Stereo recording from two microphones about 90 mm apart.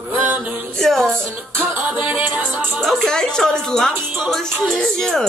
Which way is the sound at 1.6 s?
20° right (ahead or behind).